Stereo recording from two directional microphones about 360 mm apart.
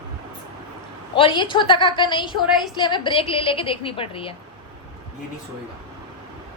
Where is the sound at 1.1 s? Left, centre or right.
Centre.